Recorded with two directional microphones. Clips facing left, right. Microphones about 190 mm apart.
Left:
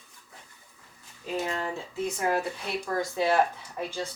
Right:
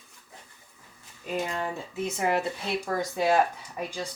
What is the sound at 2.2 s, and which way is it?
Speech, 20° right (ahead or behind).